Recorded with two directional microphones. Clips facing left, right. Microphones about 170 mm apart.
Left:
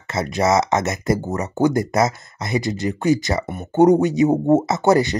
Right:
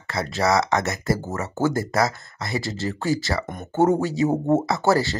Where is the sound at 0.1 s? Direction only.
20° left (ahead or behind).